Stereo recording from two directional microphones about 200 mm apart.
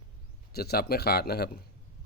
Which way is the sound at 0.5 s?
50° left (ahead or behind).